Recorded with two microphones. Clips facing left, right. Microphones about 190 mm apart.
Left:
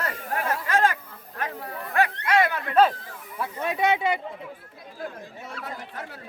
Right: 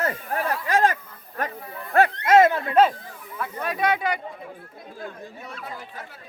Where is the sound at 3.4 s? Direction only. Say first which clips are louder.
Left 1 dB; 20° left (ahead or behind).